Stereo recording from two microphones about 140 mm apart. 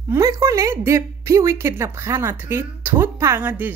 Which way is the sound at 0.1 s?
20° right (ahead or behind).